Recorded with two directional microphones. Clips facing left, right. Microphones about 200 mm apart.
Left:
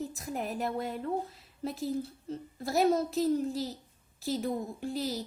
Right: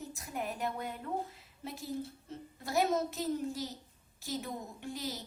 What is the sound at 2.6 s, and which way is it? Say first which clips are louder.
A woman's voice: left 4 dB; 35° left (ahead or behind).